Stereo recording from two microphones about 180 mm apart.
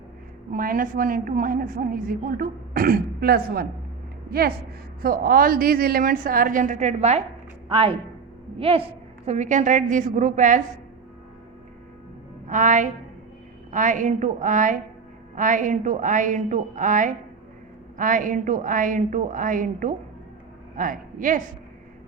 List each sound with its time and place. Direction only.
0.5 s a woman's voice: 50° right (ahead or behind)
7.7 s a woman's voice: 30° right (ahead or behind)
12.5 s a woman's voice: 45° right (ahead or behind)